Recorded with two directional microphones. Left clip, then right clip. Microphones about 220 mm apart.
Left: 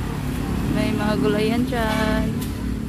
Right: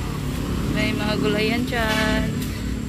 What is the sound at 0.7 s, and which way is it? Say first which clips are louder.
Speech: left 1 dB; 20° left (ahead or behind).